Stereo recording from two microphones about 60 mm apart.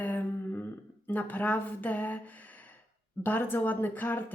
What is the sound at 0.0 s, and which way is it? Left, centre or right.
Humming, left.